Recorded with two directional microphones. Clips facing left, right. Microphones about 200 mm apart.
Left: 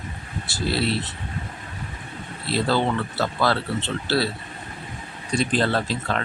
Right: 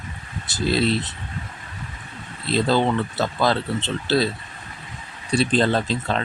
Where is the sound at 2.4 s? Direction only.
20° right (ahead or behind).